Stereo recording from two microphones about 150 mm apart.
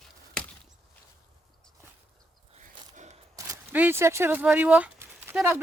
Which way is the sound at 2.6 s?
55° right (ahead or behind).